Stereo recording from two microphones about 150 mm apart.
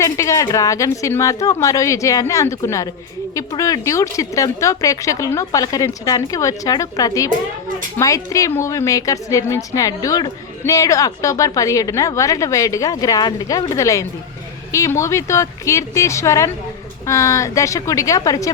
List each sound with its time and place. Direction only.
0.0 s a woman's voice: 20° left (ahead or behind)